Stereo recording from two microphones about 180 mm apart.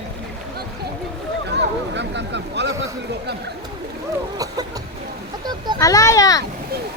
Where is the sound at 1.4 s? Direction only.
75° right (ahead or behind).